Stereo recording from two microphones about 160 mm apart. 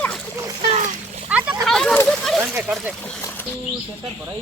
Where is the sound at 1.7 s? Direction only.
5° left (ahead or behind).